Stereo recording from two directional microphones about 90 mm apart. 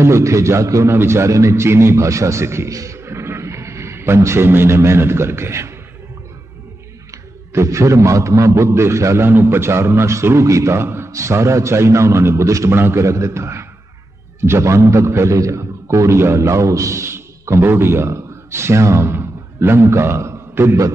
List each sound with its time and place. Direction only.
0.0 s a man's voice: 35° right (ahead or behind)
7.1 s a man's voice: 35° right (ahead or behind)